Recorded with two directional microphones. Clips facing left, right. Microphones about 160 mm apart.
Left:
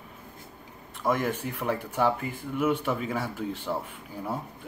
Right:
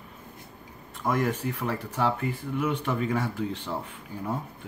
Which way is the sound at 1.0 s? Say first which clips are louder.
Right 1 dB; 10° left (ahead or behind).